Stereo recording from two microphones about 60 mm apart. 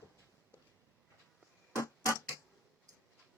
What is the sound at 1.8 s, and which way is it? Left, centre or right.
Clock, left.